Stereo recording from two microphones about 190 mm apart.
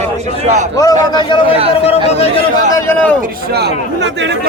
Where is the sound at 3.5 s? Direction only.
65° right (ahead or behind).